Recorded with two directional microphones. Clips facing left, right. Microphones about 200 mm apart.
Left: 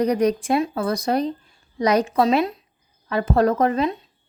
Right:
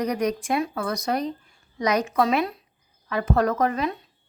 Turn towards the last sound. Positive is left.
turn(degrees=25)  # may be behind; listen again after turning